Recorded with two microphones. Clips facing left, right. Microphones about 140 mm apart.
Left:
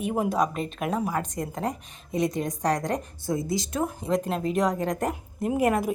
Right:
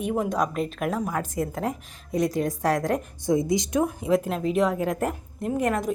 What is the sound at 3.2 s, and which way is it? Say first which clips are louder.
Speech: right 5 dB; 20° right (ahead or behind).